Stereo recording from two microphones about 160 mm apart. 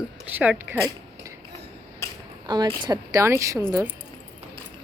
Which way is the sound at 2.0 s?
20° left (ahead or behind).